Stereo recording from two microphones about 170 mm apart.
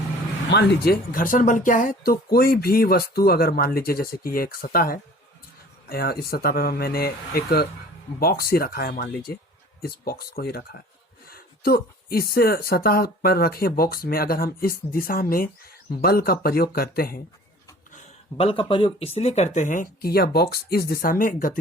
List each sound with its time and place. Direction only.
0.5 s speech: 60° left (ahead or behind)
17.9 s a sound: 35° left (ahead or behind)
18.7 s speech: 30° left (ahead or behind); by 21.6 s 55° left (ahead or behind)